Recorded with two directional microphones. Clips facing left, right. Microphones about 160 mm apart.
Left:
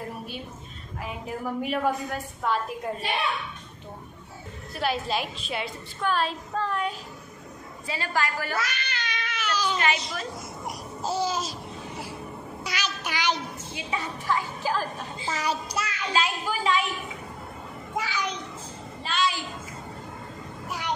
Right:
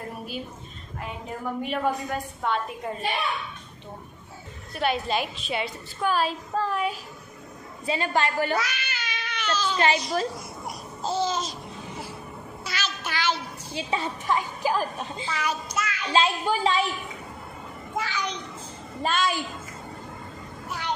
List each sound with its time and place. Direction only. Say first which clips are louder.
1.0 s a woman's voice: even; 5° left (ahead or behind)
4.7 s a woman's voice: right 2 dB; centre (ahead or behind)
7.8 s a woman's voice: right 4 dB; 20° right (ahead or behind)
8.5 s cat: right 1 dB; 5° right (ahead or behind)
11.0 s babbling: right 1 dB; 10° left (ahead or behind)
12.6 s a sound: even; 15° left (ahead or behind)
13.7 s a woman's voice: right 4 dB; 25° right (ahead or behind)
15.2 s a child's voice: left 2 dB; 35° left (ahead or behind)
16.1 s a woman's voice: right 5 dB; 30° right (ahead or behind)
17.9 s a sound: even; 10° left (ahead or behind)
19.0 s a woman's voice: right 2 dB; 50° right (ahead or behind)